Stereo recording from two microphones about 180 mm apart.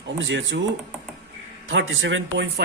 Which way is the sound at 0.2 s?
90° right.